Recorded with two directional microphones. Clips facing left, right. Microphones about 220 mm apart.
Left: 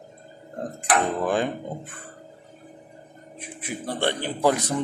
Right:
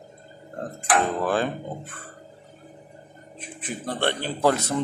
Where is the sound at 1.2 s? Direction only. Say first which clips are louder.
Even; 15° left (ahead or behind).